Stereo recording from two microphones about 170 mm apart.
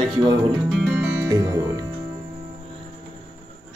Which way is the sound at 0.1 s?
25° right (ahead or behind).